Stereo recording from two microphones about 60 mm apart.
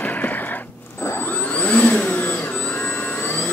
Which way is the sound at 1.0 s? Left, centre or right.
Left.